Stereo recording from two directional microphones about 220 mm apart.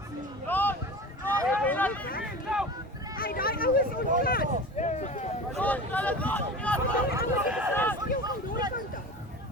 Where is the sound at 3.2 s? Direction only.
40° left (ahead or behind).